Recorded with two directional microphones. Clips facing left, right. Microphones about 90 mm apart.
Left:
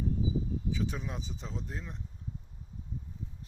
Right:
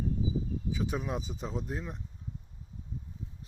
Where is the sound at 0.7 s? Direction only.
15° right (ahead or behind).